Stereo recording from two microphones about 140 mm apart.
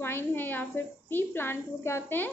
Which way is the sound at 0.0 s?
15° left (ahead or behind).